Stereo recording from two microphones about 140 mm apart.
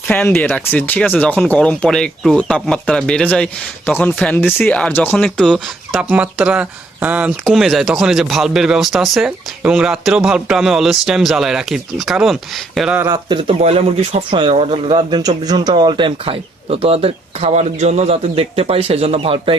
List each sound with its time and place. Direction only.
0.1 s speech: 15° left (ahead or behind)
6.0 s speech: 10° right (ahead or behind)
13.2 s speech: 35° right (ahead or behind)
13.6 s speech: 50° right (ahead or behind)
14.3 s speech: 40° right (ahead or behind)